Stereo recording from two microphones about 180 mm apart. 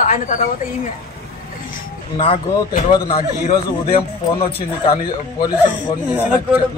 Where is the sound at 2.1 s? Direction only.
30° left (ahead or behind).